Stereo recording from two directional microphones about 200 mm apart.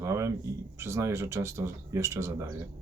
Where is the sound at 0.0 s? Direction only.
15° right (ahead or behind).